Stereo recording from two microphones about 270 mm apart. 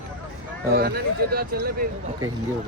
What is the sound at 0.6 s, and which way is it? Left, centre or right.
Speech, right.